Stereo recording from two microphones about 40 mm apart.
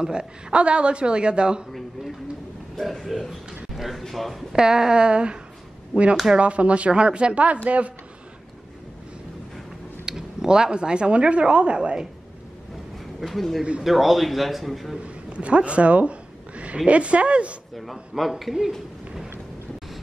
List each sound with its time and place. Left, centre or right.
0.0 s a woman's voice: centre
2.9 s a man's voice: centre
4.6 s a woman's voice: centre; by 7.9 s right
10.0 s speech: centre
13.3 s a man's voice: centre
15.0 s speech: right
18.1 s a man's voice: centre